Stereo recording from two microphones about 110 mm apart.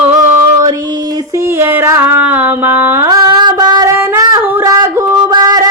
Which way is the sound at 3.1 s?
35° right (ahead or behind).